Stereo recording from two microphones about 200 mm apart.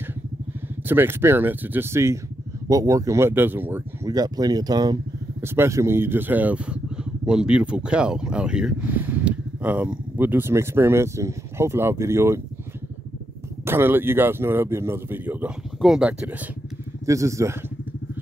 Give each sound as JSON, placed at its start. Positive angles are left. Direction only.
{"t": 0.8, "sound": "speech", "side_deg": -10}
{"t": 13.7, "sound": "speech", "side_deg": -10}